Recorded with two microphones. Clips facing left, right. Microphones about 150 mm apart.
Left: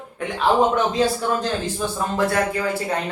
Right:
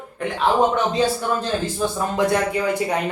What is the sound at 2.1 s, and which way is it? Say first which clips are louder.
Speech: right 1 dB; 15° right (ahead or behind).